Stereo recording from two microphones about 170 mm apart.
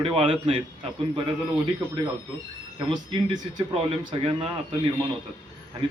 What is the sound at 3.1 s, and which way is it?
A man's voice, 25° right (ahead or behind).